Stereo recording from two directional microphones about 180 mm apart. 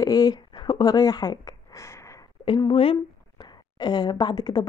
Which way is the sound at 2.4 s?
30° left (ahead or behind).